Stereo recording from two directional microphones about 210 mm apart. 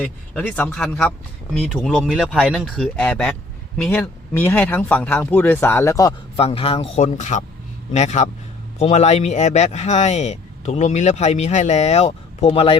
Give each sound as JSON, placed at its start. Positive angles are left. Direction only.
{"t": 0.0, "sound": "speech", "side_deg": 5}
{"t": 6.3, "sound": "speech", "side_deg": 25}